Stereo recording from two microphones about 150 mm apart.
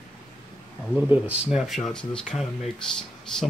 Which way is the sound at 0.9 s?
10° right (ahead or behind).